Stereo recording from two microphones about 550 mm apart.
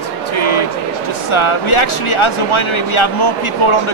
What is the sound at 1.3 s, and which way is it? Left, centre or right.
Speech, left.